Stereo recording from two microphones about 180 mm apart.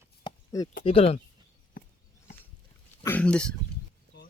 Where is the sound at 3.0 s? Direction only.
5° left (ahead or behind).